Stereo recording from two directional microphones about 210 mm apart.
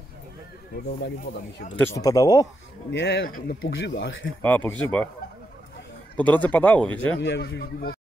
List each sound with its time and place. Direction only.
1.8 s speech: 15° left (ahead or behind)
2.9 s a man's voice: 55° left (ahead or behind)
3.7 s speech: 60° left (ahead or behind)
4.4 s speech: 10° left (ahead or behind)
6.1 s speech: 5° left (ahead or behind)
7.2 s a man's voice: 55° left (ahead or behind)